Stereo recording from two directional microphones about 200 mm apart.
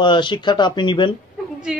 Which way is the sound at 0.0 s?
25° left (ahead or behind).